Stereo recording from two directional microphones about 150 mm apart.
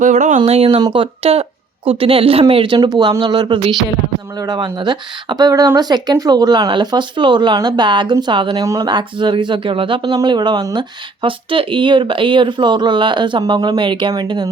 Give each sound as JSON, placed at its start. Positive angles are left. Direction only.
{"t": 0.0, "sound": "speech", "side_deg": -55}
{"t": 0.8, "sound": "speech", "side_deg": -30}